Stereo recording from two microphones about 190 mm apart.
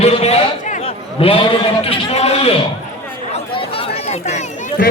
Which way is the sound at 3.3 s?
30° left (ahead or behind).